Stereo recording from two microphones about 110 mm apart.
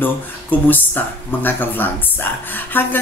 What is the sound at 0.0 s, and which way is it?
Speech, 15° left (ahead or behind).